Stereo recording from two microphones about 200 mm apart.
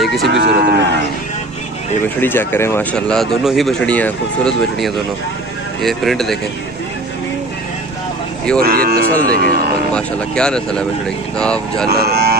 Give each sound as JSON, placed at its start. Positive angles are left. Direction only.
{"t": 0.0, "sound": "moo", "side_deg": 0}
{"t": 0.3, "sound": "moo", "side_deg": -55}
{"t": 2.1, "sound": "speech", "side_deg": 10}
{"t": 8.5, "sound": "speech", "side_deg": -50}
{"t": 9.9, "sound": "speech", "side_deg": 5}
{"t": 11.9, "sound": "speech", "side_deg": -50}